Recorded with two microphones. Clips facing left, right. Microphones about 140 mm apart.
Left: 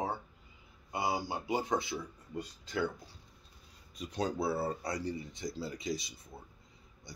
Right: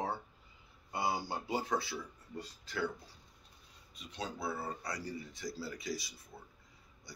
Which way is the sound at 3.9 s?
40° left (ahead or behind).